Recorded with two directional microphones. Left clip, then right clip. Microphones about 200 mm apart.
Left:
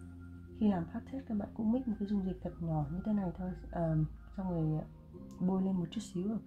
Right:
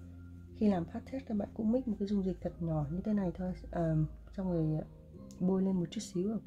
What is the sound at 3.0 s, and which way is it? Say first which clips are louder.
Speech: right 3 dB; 30° right (ahead or behind).